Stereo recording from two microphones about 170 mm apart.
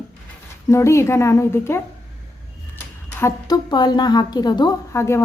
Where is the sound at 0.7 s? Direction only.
15° left (ahead or behind).